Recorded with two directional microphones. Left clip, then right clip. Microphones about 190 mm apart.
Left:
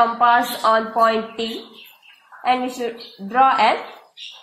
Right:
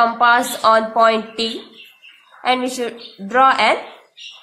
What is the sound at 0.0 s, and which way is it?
A woman's voice, 25° right (ahead or behind).